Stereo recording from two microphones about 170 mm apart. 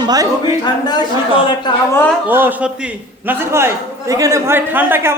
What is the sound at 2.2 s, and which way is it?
A man's voice, 10° right (ahead or behind).